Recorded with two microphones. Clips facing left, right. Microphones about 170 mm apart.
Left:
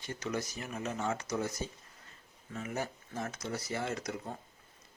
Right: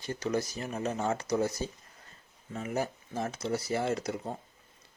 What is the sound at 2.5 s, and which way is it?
Speech, 35° right (ahead or behind).